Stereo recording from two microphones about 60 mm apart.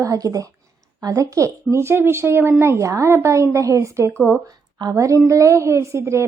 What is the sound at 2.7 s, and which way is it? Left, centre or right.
Speech, right.